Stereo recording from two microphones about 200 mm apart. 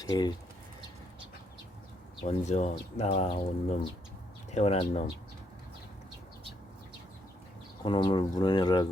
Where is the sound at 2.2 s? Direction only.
35° left (ahead or behind).